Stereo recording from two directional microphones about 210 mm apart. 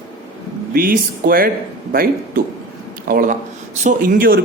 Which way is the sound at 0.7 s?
45° right (ahead or behind).